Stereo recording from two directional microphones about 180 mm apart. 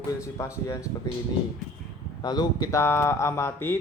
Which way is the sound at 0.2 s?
15° left (ahead or behind).